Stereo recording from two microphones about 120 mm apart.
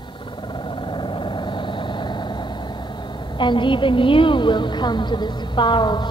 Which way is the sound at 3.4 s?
40° left (ahead or behind).